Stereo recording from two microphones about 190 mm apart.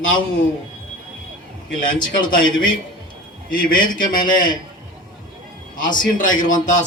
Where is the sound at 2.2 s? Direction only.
45° left (ahead or behind).